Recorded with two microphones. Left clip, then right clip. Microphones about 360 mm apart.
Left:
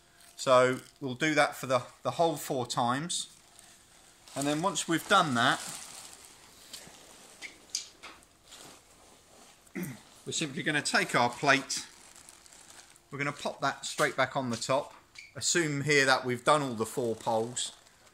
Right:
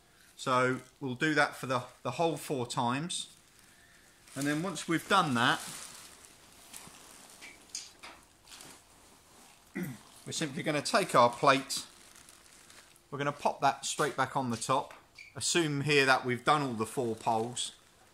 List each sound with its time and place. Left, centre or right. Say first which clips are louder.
0.4 s speech: left 5 dB; centre
4.7 s speech: left 2 dB; centre
10.3 s speech: left 2 dB; centre
13.1 s speech: right 2 dB; centre